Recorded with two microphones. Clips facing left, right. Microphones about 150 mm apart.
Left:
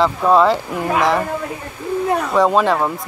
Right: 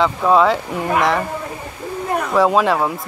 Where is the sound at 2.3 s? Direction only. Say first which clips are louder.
Right 1 dB; centre (ahead or behind).